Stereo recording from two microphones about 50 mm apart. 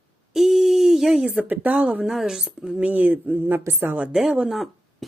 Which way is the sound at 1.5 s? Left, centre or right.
Right.